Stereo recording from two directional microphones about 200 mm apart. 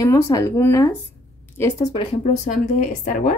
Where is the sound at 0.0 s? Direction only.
15° left (ahead or behind).